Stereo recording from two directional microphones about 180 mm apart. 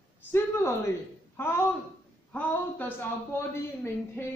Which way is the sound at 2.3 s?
10° left (ahead or behind).